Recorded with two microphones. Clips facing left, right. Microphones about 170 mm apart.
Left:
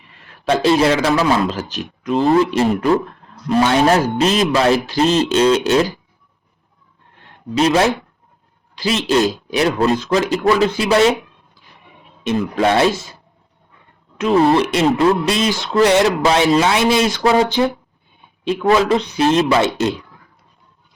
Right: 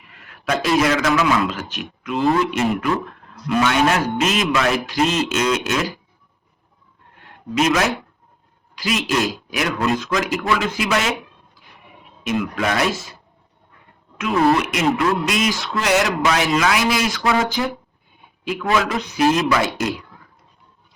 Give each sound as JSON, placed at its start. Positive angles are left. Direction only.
{"t": 0.1, "sound": "a man's voice", "side_deg": 30}
{"t": 7.2, "sound": "a sound", "side_deg": 30}
{"t": 8.7, "sound": "a man's voice", "side_deg": 30}
{"t": 12.2, "sound": "speech", "side_deg": 30}
{"t": 14.2, "sound": "speech", "side_deg": 30}